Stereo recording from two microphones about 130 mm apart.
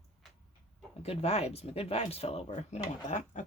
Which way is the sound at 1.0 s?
55° left (ahead or behind).